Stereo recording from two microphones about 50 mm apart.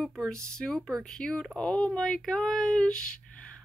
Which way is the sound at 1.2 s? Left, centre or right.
Centre.